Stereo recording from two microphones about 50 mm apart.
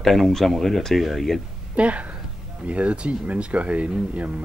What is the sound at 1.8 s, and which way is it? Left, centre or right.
Speech, right.